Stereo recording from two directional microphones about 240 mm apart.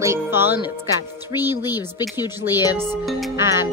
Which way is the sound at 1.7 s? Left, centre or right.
Centre.